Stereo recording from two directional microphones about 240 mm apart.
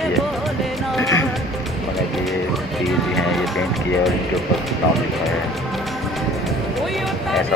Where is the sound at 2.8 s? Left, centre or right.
Centre.